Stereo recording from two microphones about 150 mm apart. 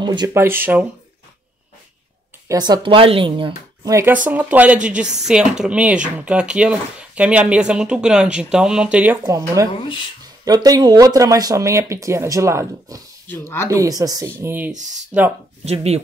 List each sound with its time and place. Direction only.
0.0 s speech: 30° right (ahead or behind)
0.3 s speech: 15° right (ahead or behind)
2.4 s speech: 25° right (ahead or behind)
3.9 s speech: 15° right (ahead or behind)
9.7 s speech: 35° left (ahead or behind)
10.4 s speech: 25° right (ahead or behind)
15.6 s speech: 45° right (ahead or behind)